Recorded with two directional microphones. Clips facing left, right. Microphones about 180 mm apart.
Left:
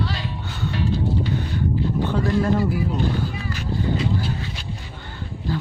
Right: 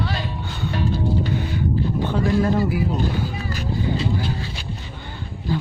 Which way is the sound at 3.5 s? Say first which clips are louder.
Even; 40° right (ahead or behind).